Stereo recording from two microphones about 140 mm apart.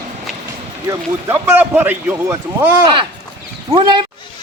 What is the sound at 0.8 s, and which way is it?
A man's voice, 15° right (ahead or behind).